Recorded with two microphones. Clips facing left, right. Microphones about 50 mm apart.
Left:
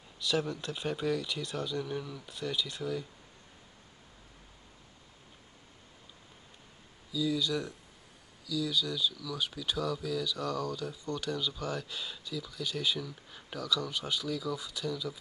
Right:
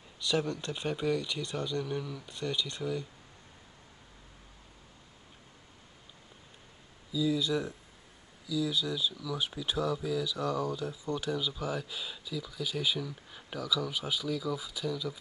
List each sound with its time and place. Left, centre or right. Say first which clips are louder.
0.2 s speech: right 1 dB; centre
7.1 s speech: right 2 dB; centre